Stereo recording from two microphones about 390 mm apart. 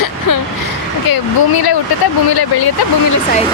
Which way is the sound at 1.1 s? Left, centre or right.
Left.